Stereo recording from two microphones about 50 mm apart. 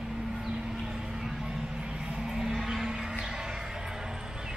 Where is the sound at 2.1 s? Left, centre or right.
Centre.